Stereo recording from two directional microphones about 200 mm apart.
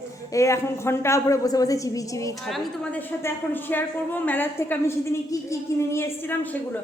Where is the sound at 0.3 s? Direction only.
15° left (ahead or behind).